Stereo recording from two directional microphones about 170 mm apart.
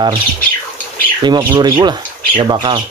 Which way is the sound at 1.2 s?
25° right (ahead or behind).